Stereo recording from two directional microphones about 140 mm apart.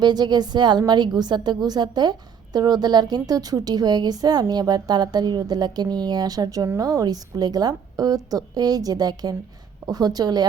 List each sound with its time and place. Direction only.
0.0 s a woman's voice: 30° right (ahead or behind)